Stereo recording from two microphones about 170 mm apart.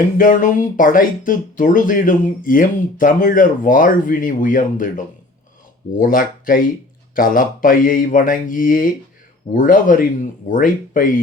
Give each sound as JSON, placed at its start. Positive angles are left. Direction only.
{"t": 0.2, "sound": "speech", "side_deg": 50}